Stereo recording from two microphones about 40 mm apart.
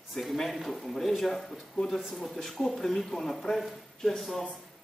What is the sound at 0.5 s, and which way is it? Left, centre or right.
Speech, centre.